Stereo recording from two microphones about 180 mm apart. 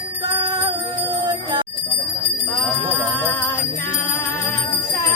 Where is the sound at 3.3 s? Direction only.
10° left (ahead or behind).